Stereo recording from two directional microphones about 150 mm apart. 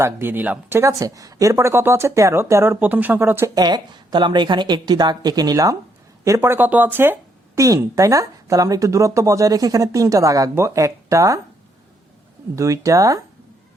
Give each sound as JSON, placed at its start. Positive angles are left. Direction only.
{"t": 0.0, "sound": "a woman's voice", "side_deg": -15}
{"t": 12.5, "sound": "a woman's voice", "side_deg": -20}